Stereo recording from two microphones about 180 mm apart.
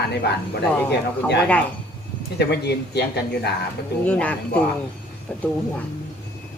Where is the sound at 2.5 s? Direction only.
65° left (ahead or behind).